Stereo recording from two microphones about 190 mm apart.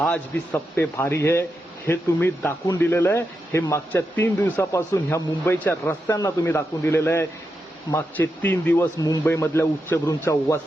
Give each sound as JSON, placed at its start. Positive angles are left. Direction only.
{"t": 0.0, "sound": "speech", "side_deg": 5}